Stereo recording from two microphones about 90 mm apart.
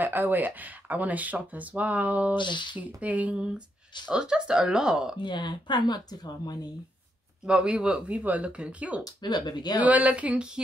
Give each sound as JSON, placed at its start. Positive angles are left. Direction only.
{"t": 0.0, "sound": "speech", "side_deg": -20}
{"t": 2.3, "sound": "speech", "side_deg": 60}
{"t": 3.0, "sound": "speech", "side_deg": -15}
{"t": 5.2, "sound": "speech", "side_deg": 55}
{"t": 7.4, "sound": "speech", "side_deg": -10}
{"t": 9.0, "sound": "speech", "side_deg": 50}
{"t": 9.8, "sound": "speech", "side_deg": -15}